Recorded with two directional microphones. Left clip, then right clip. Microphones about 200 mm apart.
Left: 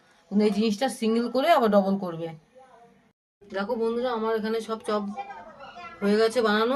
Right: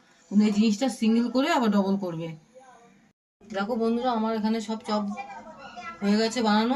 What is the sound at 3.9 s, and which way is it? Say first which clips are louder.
Speech: left 1 dB; 40° left (ahead or behind).